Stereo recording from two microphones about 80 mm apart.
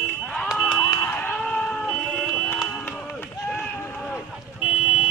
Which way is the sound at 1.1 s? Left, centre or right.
Left.